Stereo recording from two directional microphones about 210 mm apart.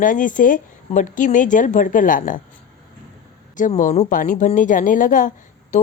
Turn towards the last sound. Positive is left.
turn(degrees=40)  # may be behind; listen again after turning